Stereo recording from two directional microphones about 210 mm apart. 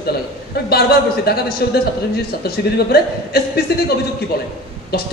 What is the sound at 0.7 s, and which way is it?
A man's voice, 50° left (ahead or behind).